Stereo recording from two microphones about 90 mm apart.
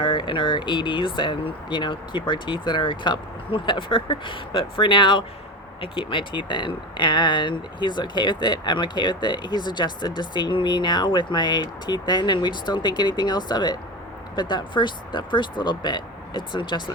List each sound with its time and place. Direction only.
0.0 s speech: 65° left (ahead or behind)